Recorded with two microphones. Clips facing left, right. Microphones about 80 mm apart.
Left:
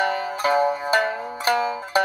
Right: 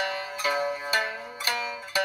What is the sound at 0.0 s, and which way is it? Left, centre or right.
Zither, left.